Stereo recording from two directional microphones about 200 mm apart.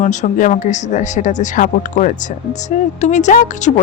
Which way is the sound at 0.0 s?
40° left (ahead or behind).